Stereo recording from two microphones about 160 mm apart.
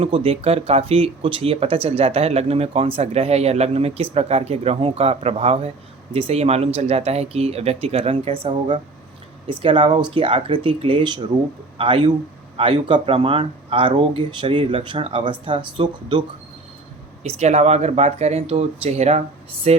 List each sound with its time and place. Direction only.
0.0 s speech: 35° right (ahead or behind)
17.2 s speech: 45° right (ahead or behind)